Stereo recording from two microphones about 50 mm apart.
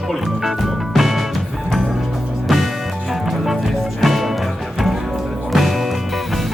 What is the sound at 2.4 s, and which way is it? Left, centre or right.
Music, centre.